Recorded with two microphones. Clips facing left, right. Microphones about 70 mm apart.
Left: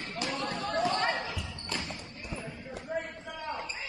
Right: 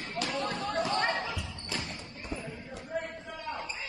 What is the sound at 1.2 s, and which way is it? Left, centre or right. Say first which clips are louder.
Basketball bounce: right 1 dB; centre.